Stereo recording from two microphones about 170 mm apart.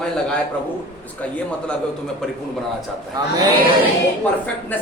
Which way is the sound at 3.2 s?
25° right (ahead or behind).